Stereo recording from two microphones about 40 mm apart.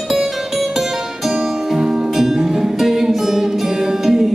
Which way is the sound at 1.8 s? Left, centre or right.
Centre.